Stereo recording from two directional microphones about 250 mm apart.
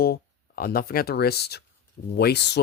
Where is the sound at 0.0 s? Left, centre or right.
Left.